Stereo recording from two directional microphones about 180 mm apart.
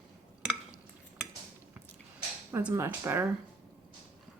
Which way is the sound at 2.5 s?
15° right (ahead or behind).